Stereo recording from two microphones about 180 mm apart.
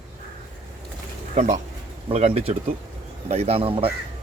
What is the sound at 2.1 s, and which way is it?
A man's voice, 35° right (ahead or behind).